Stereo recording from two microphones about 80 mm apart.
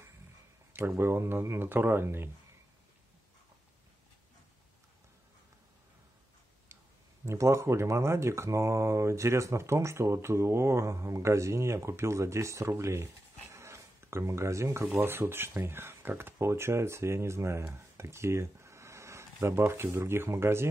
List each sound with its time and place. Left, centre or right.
0.7 s speech: right
7.2 s speech: right